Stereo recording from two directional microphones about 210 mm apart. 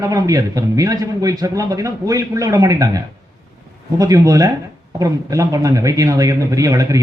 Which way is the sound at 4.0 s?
15° right (ahead or behind).